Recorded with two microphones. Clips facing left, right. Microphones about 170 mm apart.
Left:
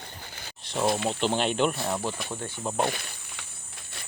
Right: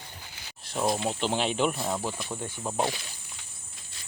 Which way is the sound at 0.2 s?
55° left (ahead or behind).